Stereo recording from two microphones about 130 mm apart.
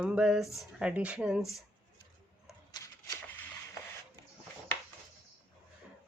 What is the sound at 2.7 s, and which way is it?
Shuffling cards, 30° left (ahead or behind).